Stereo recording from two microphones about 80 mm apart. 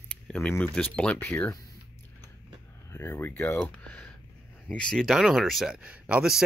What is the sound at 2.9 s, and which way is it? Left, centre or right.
Speech, left.